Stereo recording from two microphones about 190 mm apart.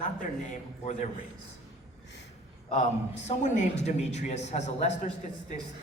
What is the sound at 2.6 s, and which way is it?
A man's voice, 35° left (ahead or behind).